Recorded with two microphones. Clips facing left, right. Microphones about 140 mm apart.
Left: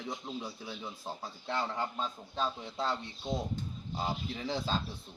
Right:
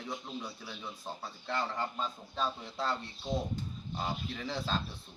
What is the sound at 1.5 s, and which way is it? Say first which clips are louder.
A man's voice: left 1 dB; 5° left (ahead or behind).